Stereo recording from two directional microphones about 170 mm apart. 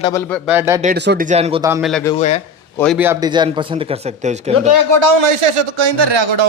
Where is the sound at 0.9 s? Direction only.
85° right.